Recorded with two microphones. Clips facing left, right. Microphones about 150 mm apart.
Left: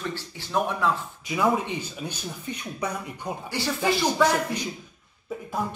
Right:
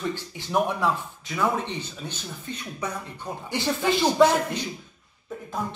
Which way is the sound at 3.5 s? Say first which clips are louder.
Right 1 dB; 20° right (ahead or behind).